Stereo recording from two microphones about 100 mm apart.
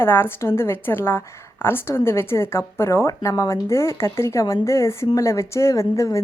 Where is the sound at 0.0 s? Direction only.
25° left (ahead or behind).